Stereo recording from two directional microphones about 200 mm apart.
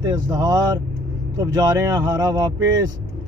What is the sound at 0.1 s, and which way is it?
Speech, 20° right (ahead or behind).